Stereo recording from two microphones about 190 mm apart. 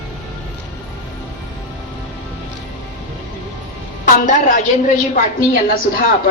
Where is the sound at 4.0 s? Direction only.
40° left (ahead or behind).